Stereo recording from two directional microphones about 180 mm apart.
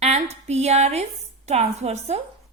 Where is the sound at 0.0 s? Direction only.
35° right (ahead or behind).